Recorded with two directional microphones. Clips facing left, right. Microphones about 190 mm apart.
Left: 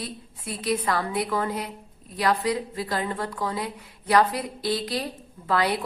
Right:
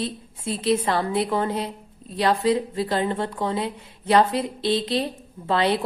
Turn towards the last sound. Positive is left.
turn(degrees=-25)  # may be behind; listen again after turning